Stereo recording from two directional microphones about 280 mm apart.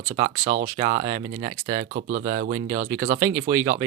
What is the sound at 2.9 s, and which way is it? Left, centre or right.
Speech, centre.